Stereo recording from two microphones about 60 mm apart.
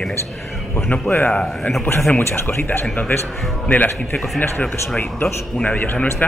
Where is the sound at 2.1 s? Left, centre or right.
Left.